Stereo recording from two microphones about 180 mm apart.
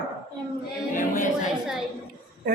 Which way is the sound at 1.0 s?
45° left (ahead or behind).